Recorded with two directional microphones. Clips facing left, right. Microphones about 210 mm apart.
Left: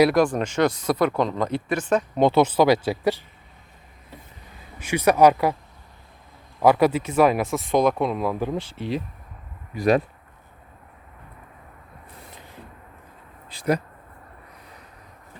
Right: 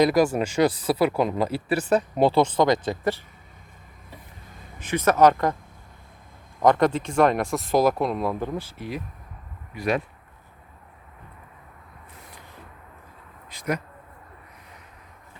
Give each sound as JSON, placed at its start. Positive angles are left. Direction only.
{"t": 0.0, "sound": "speech", "side_deg": -5}
{"t": 1.6, "sound": "speech", "side_deg": -35}
{"t": 2.0, "sound": "speech", "side_deg": -5}
{"t": 2.4, "sound": "speech", "side_deg": 5}
{"t": 4.8, "sound": "speech", "side_deg": 10}
{"t": 6.6, "sound": "speech", "side_deg": 5}
{"t": 8.5, "sound": "speech", "side_deg": 25}
{"t": 9.7, "sound": "speech", "side_deg": 40}
{"t": 13.5, "sound": "speech", "side_deg": 30}